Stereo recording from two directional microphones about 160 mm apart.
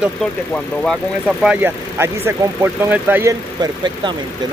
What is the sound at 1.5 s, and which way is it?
Speech, 15° right (ahead or behind).